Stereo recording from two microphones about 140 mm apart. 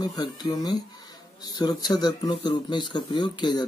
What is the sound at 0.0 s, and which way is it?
Speech, 30° left (ahead or behind).